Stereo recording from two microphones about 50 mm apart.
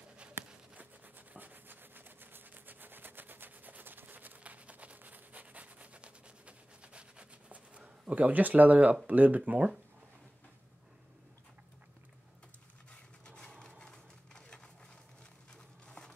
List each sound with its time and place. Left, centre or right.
0.7 s rub: right
8.1 s speech: right
13.2 s a sound: centre